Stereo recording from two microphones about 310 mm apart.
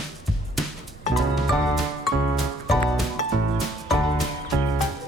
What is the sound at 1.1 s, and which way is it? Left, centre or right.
Music, centre.